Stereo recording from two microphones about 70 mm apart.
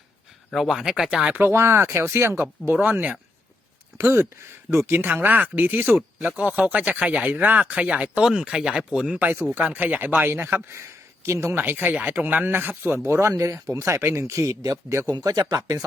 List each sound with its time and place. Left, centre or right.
0.5 s speech: centre
1.3 s speech: right
2.7 s speech: right
3.9 s speech: right
6.0 s speech: centre
9.1 s speech: right
10.7 s speech: right
11.6 s speech: right
12.5 s speech: right
15.2 s speech: right